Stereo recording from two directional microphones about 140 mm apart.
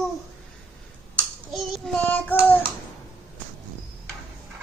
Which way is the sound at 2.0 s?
10° left (ahead or behind).